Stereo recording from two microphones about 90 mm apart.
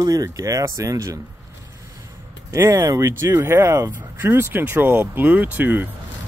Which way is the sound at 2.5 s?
35° right (ahead or behind).